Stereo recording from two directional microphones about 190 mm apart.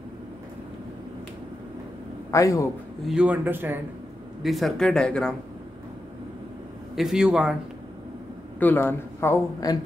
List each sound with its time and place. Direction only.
2.3 s speech: 15° left (ahead or behind)
3.1 s a man's voice: 5° right (ahead or behind)
4.4 s speech: centre (ahead or behind)
7.0 s speech: 5° right (ahead or behind)
8.5 s speech: 10° left (ahead or behind)